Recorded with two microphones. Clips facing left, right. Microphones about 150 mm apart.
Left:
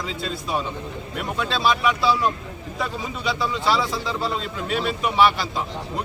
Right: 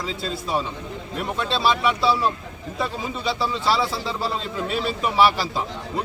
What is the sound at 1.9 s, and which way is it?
A man's voice, 30° right (ahead or behind).